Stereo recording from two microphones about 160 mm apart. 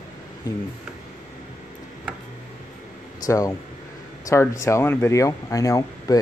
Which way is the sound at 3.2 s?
20° left (ahead or behind).